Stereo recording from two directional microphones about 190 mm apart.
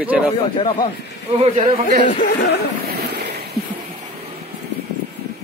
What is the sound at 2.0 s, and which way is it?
Speech, 45° left (ahead or behind).